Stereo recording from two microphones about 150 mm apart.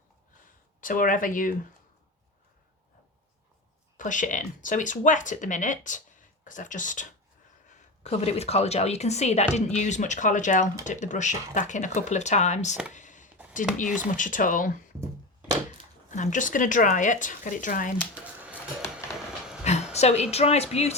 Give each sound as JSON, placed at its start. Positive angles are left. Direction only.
{"t": 0.8, "sound": "speech", "side_deg": 65}
{"t": 3.9, "sound": "speech", "side_deg": 60}
{"t": 8.0, "sound": "speech", "side_deg": 45}
{"t": 12.9, "sound": "a sound", "side_deg": 55}
{"t": 14.0, "sound": "speech", "side_deg": 60}
{"t": 16.0, "sound": "speech", "side_deg": 55}
{"t": 18.1, "sound": "a sound", "side_deg": -10}
{"t": 19.6, "sound": "a sound", "side_deg": 45}
{"t": 20.3, "sound": "speech", "side_deg": 45}